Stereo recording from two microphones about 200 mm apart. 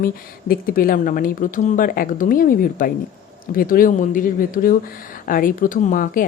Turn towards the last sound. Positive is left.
turn(degrees=45)  # may be behind; listen again after turning